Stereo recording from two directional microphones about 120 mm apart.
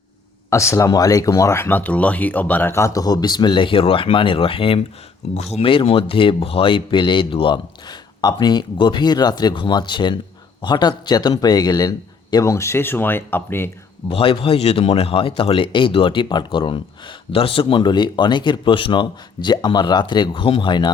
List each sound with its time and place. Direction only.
0.5 s speech: 25° left (ahead or behind); by 4.8 s 50° left (ahead or behind)
5.3 s speech: 65° left (ahead or behind); by 13.7 s 20° left (ahead or behind)
14.1 s speech: 50° left (ahead or behind)